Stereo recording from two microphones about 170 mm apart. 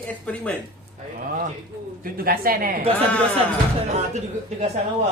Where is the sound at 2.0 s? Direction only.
60° right (ahead or behind).